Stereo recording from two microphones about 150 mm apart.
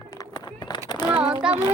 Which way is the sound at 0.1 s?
25° left (ahead or behind).